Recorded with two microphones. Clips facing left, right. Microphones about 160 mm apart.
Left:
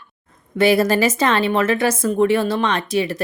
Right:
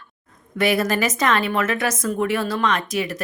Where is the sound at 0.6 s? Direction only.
30° left (ahead or behind).